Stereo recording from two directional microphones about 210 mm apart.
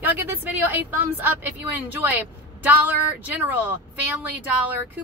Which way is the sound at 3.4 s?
10° right (ahead or behind).